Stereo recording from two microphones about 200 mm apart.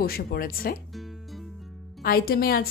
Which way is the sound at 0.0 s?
50° left (ahead or behind).